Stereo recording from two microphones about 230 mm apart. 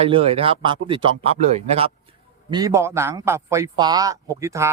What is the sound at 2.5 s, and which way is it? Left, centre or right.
Speech, centre.